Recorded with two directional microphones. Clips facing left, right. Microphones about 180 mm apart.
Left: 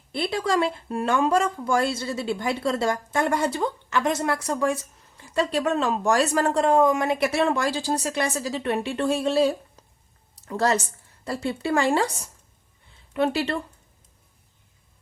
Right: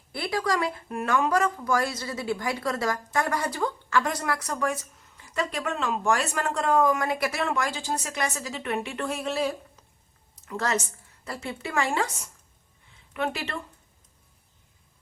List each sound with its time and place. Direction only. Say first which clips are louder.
0.1 s speech: left 3 dB; 25° left (ahead or behind)
10.3 s a sound: left 6 dB; 35° left (ahead or behind)
11.3 s speech: left 8 dB; 30° left (ahead or behind)